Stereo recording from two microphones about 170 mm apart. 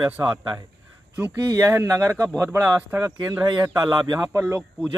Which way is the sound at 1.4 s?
20° right (ahead or behind).